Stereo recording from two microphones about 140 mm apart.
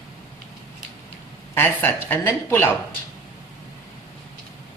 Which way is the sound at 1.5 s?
15° left (ahead or behind).